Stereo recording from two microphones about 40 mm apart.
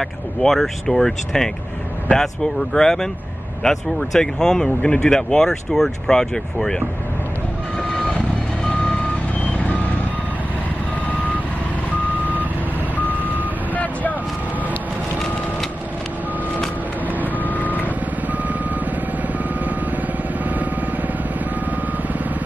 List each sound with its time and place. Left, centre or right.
0.4 s speech: centre
12.9 s reversing beeps: left
17.4 s reversing beeps: left